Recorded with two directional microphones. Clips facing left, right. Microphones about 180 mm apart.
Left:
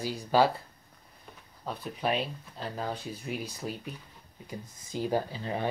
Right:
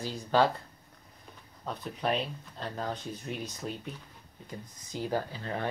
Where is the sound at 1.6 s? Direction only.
5° left (ahead or behind).